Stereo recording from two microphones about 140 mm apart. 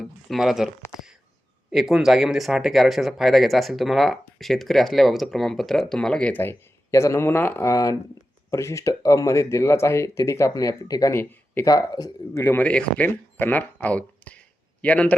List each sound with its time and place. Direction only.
0.0 s speech: centre (ahead or behind)
1.7 s speech: 5° right (ahead or behind); by 11.6 s 15° left (ahead or behind)
11.6 s speech: 25° left (ahead or behind)
12.4 s speech: 15° left (ahead or behind)